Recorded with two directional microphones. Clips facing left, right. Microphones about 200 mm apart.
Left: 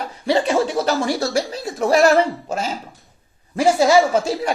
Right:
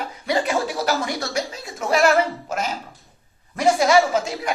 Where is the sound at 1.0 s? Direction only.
30° left (ahead or behind).